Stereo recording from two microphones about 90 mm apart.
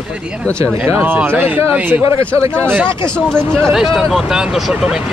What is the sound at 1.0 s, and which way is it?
Speech, 20° right (ahead or behind).